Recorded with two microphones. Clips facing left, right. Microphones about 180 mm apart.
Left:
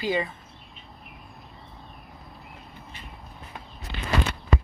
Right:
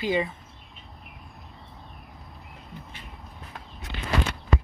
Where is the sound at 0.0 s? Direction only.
20° right (ahead or behind).